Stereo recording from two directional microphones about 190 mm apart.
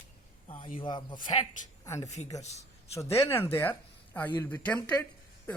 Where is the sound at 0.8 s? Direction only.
25° left (ahead or behind).